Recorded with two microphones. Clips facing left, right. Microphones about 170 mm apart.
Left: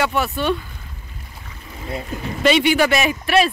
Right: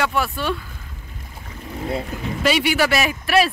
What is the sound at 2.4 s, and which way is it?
Speech, 5° right (ahead or behind).